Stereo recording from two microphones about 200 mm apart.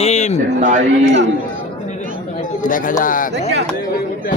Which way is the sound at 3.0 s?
45° left (ahead or behind).